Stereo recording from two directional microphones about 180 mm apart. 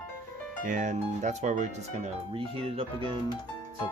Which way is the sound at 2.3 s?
30° right (ahead or behind).